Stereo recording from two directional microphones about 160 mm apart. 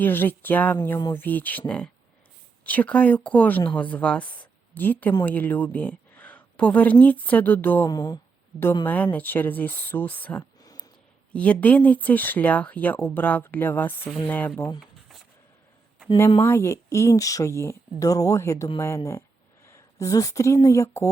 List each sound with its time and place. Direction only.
0.0 s speech: 10° left (ahead or behind)
7.9 s speech: 25° left (ahead or behind)
8.8 s speech: 10° left (ahead or behind)
10.6 s a sound: 25° left (ahead or behind)
11.3 s speech: 10° left (ahead or behind)
16.4 s speech: 15° left (ahead or behind)